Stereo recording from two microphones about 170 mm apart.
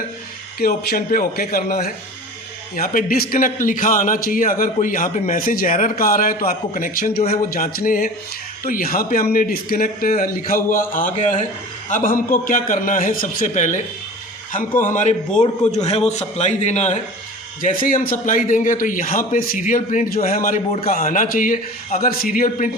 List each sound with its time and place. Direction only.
0.6 s a man's voice: 65° left (ahead or behind); by 17.0 s 40° left (ahead or behind)
17.6 s a man's voice: 50° left (ahead or behind)